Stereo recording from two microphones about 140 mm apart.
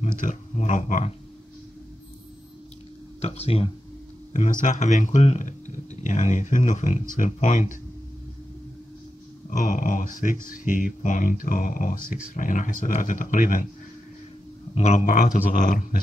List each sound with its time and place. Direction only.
0.0 s speech: 65° left (ahead or behind)
3.2 s speech: 45° left (ahead or behind)
4.3 s speech: 65° left (ahead or behind)
9.5 s speech: 75° left (ahead or behind)
14.7 s speech: 50° left (ahead or behind); by 16.0 s 70° left (ahead or behind)